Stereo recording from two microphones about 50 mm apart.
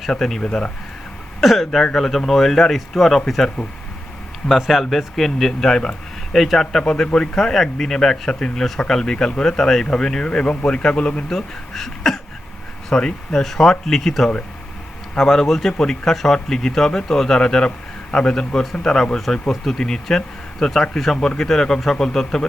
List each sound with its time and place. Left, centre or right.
0.0 s speech: centre
10.4 s a man's voice: left
10.8 s speech: centre